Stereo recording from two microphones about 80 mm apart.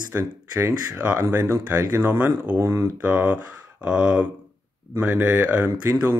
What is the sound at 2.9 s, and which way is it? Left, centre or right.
Speech, centre.